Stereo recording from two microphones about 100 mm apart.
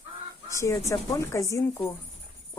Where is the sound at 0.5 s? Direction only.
30° left (ahead or behind).